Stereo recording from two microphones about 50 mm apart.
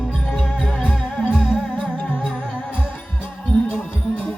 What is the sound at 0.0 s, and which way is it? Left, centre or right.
Music, left.